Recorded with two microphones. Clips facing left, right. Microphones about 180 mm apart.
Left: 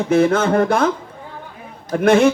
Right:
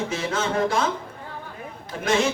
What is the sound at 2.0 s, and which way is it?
Speech, 55° left (ahead or behind).